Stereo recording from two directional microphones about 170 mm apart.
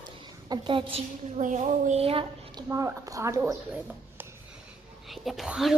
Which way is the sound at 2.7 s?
15° right (ahead or behind).